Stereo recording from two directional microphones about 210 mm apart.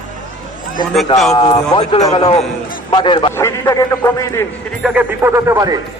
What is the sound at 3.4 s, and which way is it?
A man's voice, 15° left (ahead or behind).